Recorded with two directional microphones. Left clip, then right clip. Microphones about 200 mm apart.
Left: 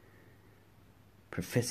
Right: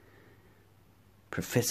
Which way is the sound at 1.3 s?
20° right (ahead or behind).